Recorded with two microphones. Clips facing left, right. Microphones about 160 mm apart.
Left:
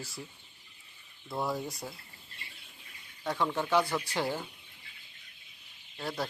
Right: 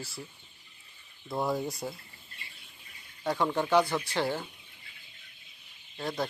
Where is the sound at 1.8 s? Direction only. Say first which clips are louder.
Right 5 dB; 5° right (ahead or behind).